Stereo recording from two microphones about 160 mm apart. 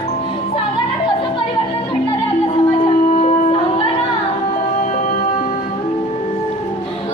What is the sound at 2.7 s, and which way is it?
Music, 50° left (ahead or behind).